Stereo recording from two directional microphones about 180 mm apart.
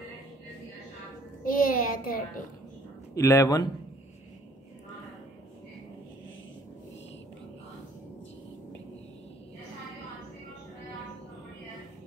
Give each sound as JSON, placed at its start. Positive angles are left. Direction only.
{"t": 1.4, "sound": "a child's voice", "side_deg": 50}
{"t": 3.2, "sound": "a man's voice", "side_deg": 15}